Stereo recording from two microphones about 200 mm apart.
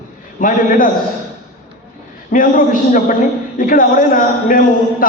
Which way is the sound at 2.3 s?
40° left (ahead or behind).